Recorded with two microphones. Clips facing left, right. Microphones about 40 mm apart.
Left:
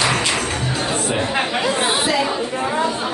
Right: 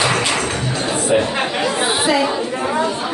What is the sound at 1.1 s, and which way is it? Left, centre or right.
Chatter, centre.